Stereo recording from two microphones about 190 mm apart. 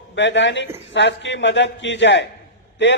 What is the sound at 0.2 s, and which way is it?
A man's voice, 70° left (ahead or behind).